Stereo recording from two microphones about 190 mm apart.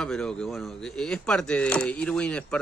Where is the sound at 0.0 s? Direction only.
5° left (ahead or behind).